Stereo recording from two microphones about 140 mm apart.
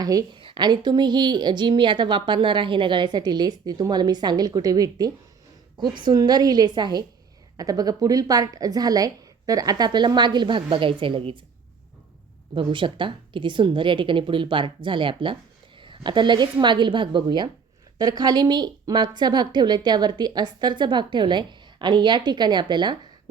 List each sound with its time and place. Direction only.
0.0 s a woman's voice: 25° right (ahead or behind)
12.5 s a woman's voice: 35° right (ahead or behind)